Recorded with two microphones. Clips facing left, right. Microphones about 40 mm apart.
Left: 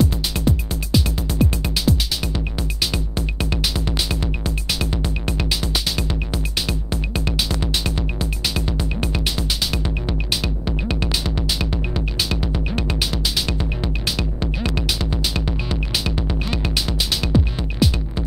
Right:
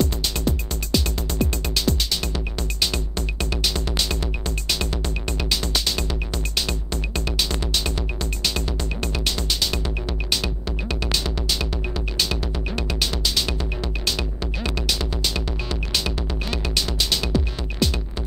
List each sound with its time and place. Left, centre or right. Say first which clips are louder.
0.0 s music: left 3 dB; centre
3.7 s music: left 1 dB; centre
14.4 s music: left 3 dB; centre